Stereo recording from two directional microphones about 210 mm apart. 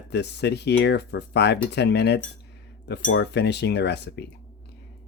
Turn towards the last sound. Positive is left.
turn(degrees=55)  # may be behind; listen again after turning